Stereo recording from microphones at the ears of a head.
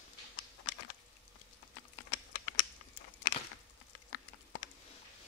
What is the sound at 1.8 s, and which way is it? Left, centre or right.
Computer keyboard, left.